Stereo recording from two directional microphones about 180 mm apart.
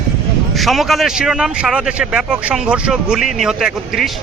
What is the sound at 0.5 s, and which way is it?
A man's voice, centre (ahead or behind).